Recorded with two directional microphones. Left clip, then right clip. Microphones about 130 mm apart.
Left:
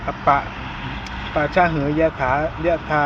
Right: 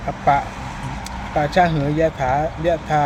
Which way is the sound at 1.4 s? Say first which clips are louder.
Right 1 dB; 45° right (ahead or behind).